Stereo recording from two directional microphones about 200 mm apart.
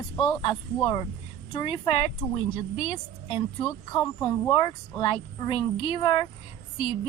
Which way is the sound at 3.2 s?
25° left (ahead or behind).